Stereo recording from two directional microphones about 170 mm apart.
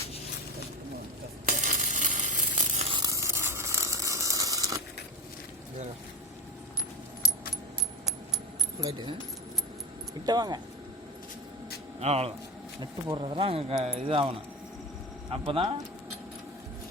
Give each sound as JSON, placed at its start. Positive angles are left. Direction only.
{"t": 1.5, "sound": "stir", "side_deg": -50}
{"t": 2.9, "sound": "sizzle", "side_deg": -20}
{"t": 10.2, "sound": "speech", "side_deg": -25}
{"t": 11.9, "sound": "speech", "side_deg": -35}
{"t": 15.3, "sound": "speech", "side_deg": -35}